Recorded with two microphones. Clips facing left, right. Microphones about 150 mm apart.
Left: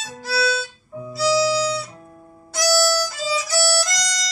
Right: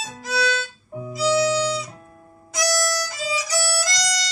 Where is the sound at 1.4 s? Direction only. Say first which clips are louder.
Even; 30° left (ahead or behind).